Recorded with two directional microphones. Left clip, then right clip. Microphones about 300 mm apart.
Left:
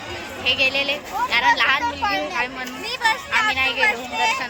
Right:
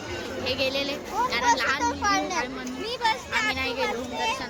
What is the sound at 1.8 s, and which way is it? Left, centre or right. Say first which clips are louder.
Speech: left 2 dB; right.